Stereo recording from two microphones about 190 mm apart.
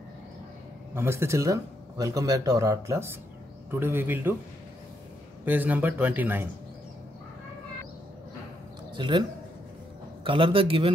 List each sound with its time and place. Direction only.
0.9 s speech: 15° right (ahead or behind)
5.4 s speech: 10° right (ahead or behind)
8.9 s speech: 25° right (ahead or behind)
10.2 s a man's voice: 30° right (ahead or behind)